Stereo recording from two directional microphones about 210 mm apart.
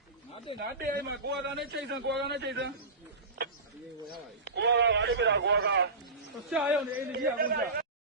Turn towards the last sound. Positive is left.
turn(degrees=-50)  # may be behind; listen again after turning